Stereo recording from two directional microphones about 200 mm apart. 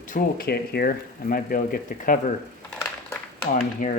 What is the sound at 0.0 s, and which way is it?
Speech, 45° left (ahead or behind).